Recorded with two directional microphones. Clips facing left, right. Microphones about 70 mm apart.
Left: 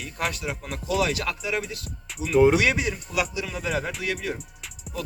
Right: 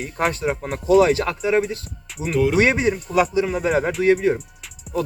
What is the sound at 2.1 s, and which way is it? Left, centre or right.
Music, centre.